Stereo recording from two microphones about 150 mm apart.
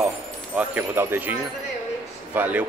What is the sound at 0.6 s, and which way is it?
Speech, 15° right (ahead or behind).